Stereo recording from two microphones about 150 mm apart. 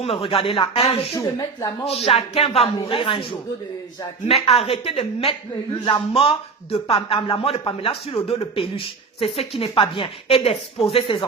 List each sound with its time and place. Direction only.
0.0 s speech: 40° left (ahead or behind)
1.1 s speech: 20° left (ahead or behind)
1.8 s music: 45° left (ahead or behind)
2.8 s speech: 35° left (ahead or behind)
4.3 s speech: 40° left (ahead or behind)